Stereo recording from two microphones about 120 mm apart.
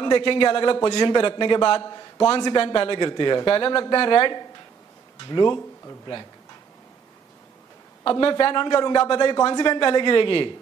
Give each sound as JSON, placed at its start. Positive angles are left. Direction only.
{"t": 0.0, "sound": "a man's voice", "side_deg": 40}
{"t": 8.0, "sound": "a man's voice", "side_deg": 45}